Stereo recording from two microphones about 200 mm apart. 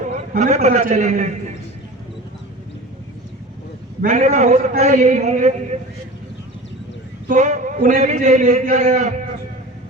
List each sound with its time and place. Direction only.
0.3 s a man's voice: 35° right (ahead or behind)
4.0 s a man's voice: 35° right (ahead or behind)
7.3 s a man's voice: 40° right (ahead or behind)